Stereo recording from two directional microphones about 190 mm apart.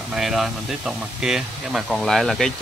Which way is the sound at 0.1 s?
Centre (ahead or behind).